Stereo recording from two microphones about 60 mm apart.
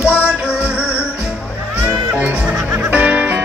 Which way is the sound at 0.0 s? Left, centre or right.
Right.